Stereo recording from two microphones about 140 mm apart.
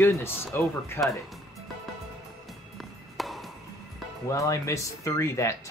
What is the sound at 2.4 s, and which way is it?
Music, centre (ahead or behind).